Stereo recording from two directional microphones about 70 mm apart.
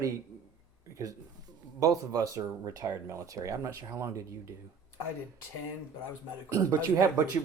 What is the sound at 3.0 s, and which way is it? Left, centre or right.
Speech, right.